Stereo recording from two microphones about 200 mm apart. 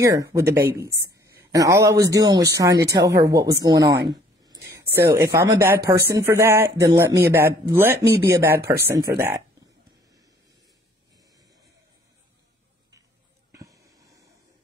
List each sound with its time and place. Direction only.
0.0 s speech: 15° right (ahead or behind)
4.6 s a sound: 15° right (ahead or behind)
5.4 s speech: 10° right (ahead or behind)
8.0 s speech: 55° right (ahead or behind)
8.4 s speech: 10° right (ahead or behind)
13.5 s a sound: 15° right (ahead or behind)